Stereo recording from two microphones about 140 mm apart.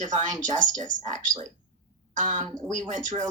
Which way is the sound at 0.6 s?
65° right (ahead or behind).